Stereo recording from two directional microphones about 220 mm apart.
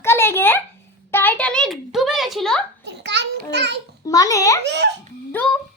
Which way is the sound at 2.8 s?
50° right (ahead or behind).